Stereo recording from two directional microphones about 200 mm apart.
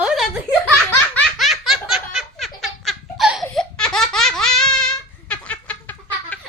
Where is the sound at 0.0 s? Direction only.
5° right (ahead or behind).